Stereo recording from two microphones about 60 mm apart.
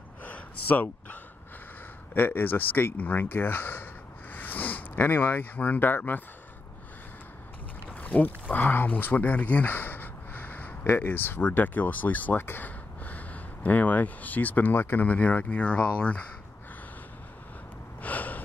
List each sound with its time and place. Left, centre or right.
0.2 s a sound: left
2.1 s speech: left
7.9 s speech: left
18.0 s gasp: left